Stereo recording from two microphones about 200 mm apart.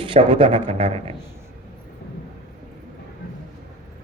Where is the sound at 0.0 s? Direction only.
25° right (ahead or behind).